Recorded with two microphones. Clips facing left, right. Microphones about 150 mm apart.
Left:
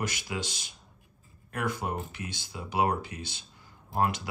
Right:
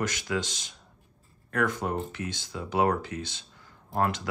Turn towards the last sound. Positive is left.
turn(degrees=10)  # may be behind; listen again after turning